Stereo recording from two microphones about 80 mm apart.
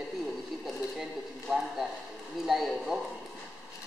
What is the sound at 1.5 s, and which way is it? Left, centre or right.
A man's voice, centre.